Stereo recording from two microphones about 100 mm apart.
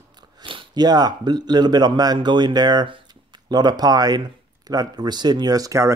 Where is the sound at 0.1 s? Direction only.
55° right (ahead or behind).